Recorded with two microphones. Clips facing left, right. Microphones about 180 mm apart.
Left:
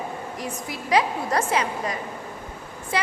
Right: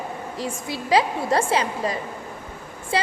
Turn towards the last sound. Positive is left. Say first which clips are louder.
# right 2 dB
turn(degrees=-30)  # may be behind; listen again after turning